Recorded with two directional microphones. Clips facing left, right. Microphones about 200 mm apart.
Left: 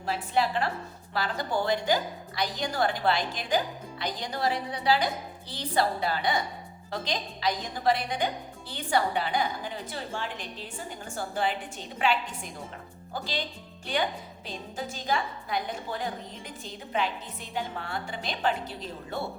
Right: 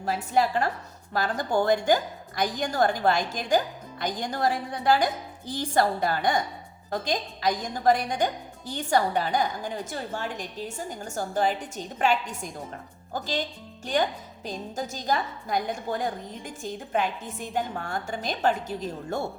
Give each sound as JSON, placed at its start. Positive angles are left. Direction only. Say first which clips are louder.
{"t": 0.0, "sound": "a woman's voice", "louder": "right 3 dB", "side_deg": -45}